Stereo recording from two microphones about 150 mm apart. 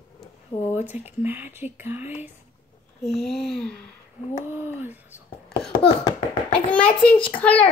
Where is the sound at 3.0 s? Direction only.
Centre (ahead or behind).